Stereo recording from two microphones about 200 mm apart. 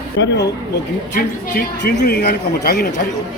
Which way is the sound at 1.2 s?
50° left (ahead or behind).